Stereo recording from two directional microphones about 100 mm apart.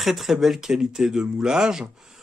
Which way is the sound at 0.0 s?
Centre (ahead or behind).